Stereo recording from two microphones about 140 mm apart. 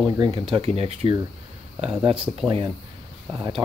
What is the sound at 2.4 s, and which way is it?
Speech, 35° right (ahead or behind).